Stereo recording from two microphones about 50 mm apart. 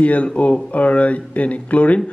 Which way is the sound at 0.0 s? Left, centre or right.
Left.